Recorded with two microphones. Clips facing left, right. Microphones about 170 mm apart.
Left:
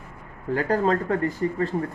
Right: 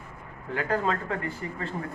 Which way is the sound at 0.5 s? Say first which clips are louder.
Left 5 dB; 40° left (ahead or behind).